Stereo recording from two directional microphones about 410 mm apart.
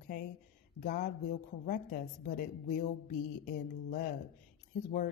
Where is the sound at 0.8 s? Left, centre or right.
Centre.